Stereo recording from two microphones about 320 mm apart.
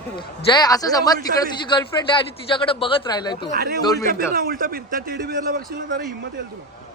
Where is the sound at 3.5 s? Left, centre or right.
Right.